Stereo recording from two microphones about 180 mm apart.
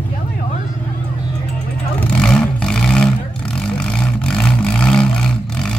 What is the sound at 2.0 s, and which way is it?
Vehicle, 5° left (ahead or behind).